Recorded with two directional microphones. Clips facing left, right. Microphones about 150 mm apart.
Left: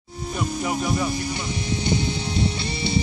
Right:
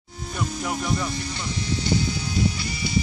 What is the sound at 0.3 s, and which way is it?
Music, 5° left (ahead or behind).